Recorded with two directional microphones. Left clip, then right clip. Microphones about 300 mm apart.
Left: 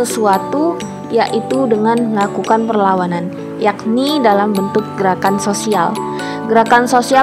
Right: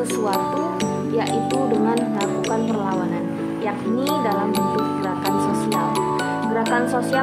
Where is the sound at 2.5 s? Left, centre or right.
Left.